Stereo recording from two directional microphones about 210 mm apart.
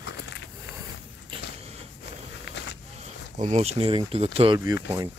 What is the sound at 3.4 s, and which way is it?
Speech, 30° right (ahead or behind).